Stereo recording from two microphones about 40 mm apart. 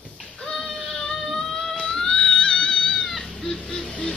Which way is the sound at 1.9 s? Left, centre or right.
Centre.